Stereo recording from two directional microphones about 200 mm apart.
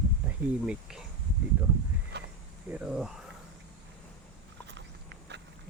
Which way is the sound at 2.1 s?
55° right (ahead or behind).